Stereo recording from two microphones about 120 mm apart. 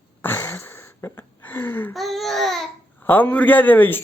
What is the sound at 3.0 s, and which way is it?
Speech, 15° left (ahead or behind).